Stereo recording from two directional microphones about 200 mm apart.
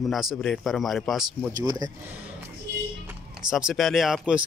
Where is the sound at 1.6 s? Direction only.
20° right (ahead or behind).